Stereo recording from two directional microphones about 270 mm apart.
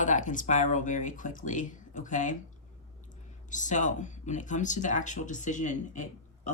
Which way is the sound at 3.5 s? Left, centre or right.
Left.